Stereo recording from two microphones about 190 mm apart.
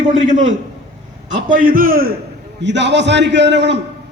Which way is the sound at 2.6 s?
65° right (ahead or behind).